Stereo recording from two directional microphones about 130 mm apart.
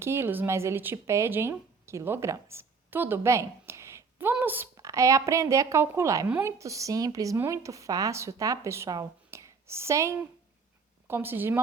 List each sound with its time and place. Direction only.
0.0 s speech: 20° right (ahead or behind)
6.2 s a woman's voice: 10° right (ahead or behind)
6.6 s a woman's voice: 25° right (ahead or behind)